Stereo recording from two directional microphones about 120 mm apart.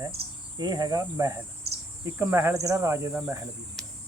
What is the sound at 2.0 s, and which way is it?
Speech, 25° right (ahead or behind).